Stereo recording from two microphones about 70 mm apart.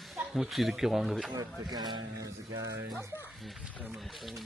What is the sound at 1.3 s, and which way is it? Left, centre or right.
Speech, right.